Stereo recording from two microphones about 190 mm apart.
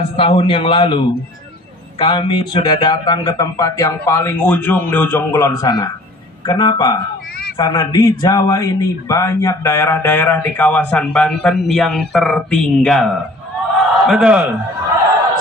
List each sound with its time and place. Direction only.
0.1 s a man's voice: 30° left (ahead or behind); by 14.5 s 5° right (ahead or behind)